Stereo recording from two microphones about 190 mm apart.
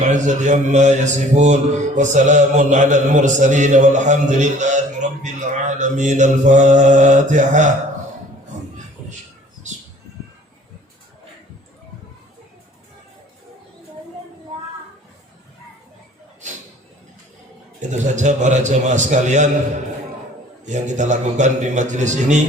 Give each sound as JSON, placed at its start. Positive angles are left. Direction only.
{"t": 0.0, "sound": "speech", "side_deg": -40}
{"t": 17.7, "sound": "speech", "side_deg": -40}
{"t": 20.7, "sound": "speech", "side_deg": -40}